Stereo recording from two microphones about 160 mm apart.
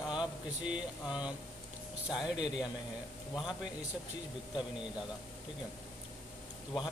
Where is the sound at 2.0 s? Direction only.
5° right (ahead or behind).